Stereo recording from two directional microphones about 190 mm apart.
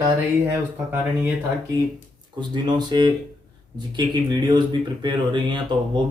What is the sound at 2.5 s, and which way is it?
Speech, 20° right (ahead or behind).